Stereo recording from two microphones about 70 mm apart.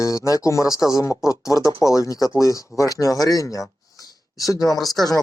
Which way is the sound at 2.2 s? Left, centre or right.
Left.